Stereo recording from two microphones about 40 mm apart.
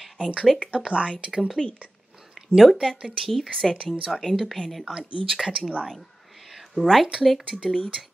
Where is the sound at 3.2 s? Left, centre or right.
Centre.